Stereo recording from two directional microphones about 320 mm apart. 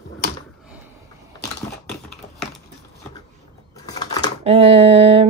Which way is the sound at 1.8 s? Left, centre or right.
Centre.